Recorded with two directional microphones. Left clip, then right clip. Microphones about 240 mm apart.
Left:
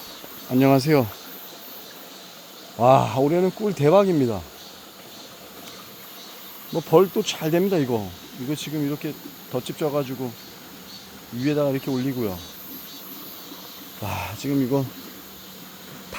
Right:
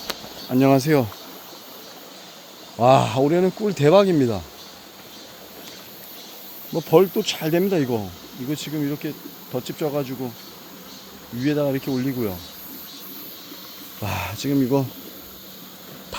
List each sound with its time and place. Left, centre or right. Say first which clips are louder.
0.5 s speech: right 1 dB; centre
2.7 s speech: right 1 dB; centre
6.7 s speech: right 1 dB; centre
11.4 s speech: even; centre
14.0 s speech: right 2 dB; centre